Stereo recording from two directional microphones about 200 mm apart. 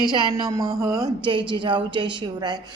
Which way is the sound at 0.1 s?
20° right (ahead or behind).